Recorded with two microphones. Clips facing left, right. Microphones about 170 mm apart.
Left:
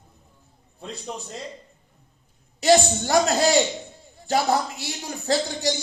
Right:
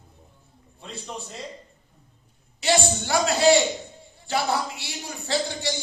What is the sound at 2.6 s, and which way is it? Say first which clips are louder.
Speech: left 5 dB; 40° left (ahead or behind).